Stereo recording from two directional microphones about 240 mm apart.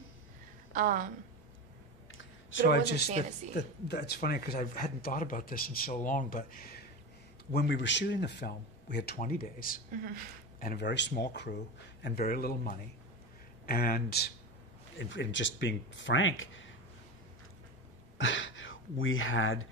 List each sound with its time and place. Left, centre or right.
0.7 s a woman's voice: right
2.6 s speech: left
7.5 s speech: left
18.1 s speech: left